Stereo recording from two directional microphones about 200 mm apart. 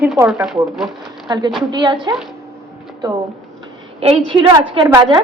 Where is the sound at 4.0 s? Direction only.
25° right (ahead or behind).